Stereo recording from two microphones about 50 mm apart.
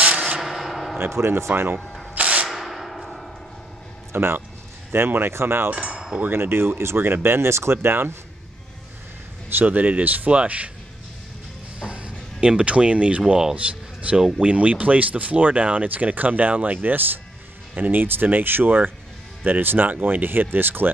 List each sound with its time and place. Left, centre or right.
0.0 s a sound: right
0.4 s a sound: centre
0.9 s speech: right
1.8 s rub: centre
2.1 s a sound: right
2.5 s a sound: centre
4.1 s speech: right
5.7 s wind chime: right
6.3 s speech: right
9.6 s speech: right
11.8 s music: right
13.3 s speech: centre
13.6 s speech: right